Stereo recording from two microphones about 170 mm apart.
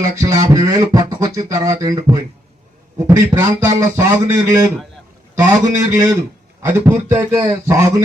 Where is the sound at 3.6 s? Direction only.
15° right (ahead or behind).